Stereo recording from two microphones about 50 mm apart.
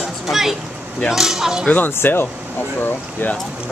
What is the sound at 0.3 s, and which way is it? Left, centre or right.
Speech, centre.